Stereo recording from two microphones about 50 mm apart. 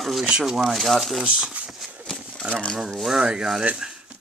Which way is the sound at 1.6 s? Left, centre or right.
Right.